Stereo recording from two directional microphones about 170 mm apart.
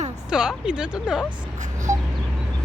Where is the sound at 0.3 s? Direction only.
5° right (ahead or behind).